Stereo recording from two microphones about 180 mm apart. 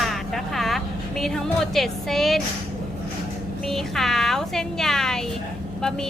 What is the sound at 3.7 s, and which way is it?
A woman's voice, centre (ahead or behind).